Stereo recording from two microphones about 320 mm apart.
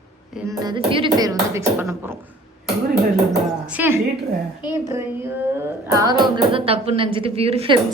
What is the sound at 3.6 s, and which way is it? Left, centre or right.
A woman's voice, centre.